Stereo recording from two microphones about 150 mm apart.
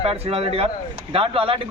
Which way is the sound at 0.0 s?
40° right (ahead or behind).